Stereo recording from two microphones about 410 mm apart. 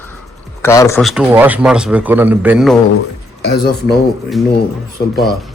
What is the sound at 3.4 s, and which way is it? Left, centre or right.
Speech, left.